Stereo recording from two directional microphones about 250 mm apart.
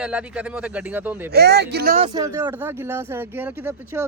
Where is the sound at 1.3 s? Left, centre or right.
Right.